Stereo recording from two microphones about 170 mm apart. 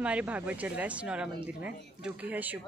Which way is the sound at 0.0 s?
5° right (ahead or behind).